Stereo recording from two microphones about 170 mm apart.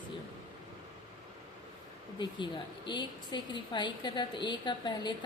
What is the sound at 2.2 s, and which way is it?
A woman's voice, 30° left (ahead or behind).